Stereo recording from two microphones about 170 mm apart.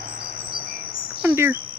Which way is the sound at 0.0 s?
60° right (ahead or behind).